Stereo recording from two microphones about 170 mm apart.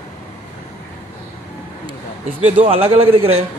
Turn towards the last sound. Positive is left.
turn(degrees=-35)  # may be behind; listen again after turning